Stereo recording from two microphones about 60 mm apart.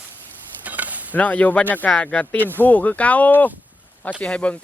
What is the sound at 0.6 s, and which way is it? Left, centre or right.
Stir, right.